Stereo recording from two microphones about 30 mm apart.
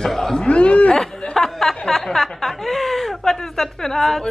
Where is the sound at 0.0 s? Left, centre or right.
Centre.